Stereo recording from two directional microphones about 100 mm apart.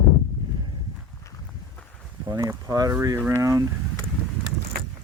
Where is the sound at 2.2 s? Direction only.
40° right (ahead or behind).